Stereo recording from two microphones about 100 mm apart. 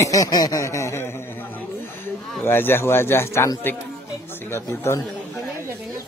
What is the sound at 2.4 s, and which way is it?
Speech, 25° left (ahead or behind).